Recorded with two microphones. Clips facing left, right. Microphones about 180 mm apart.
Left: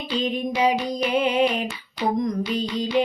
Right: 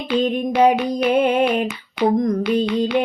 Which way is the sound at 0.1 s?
55° right (ahead or behind).